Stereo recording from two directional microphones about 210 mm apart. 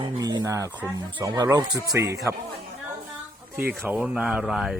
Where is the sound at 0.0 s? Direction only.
20° right (ahead or behind).